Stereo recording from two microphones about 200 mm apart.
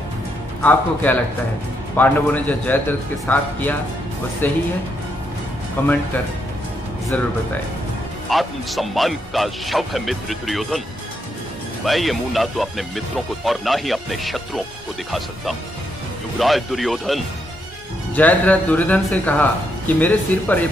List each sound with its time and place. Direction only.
0.6 s a man's voice: 10° left (ahead or behind)
5.8 s a man's voice: 10° left (ahead or behind)
8.3 s speech: centre (ahead or behind)
11.8 s a man's voice: centre (ahead or behind)